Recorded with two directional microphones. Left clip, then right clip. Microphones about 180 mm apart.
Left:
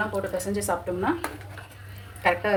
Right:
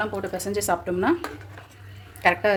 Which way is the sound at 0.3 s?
65° right (ahead or behind).